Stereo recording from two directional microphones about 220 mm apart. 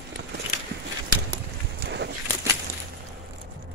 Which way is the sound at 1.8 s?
50° right (ahead or behind).